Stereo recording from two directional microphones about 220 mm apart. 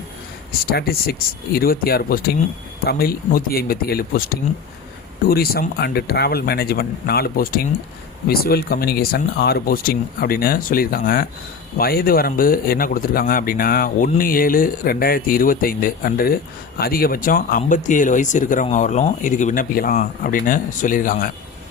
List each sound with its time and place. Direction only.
0.6 s speech: 45° left (ahead or behind)